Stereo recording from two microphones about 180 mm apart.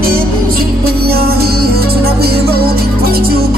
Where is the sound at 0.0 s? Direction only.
55° right (ahead or behind).